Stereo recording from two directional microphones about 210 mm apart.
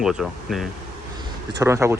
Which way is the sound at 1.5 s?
15° right (ahead or behind).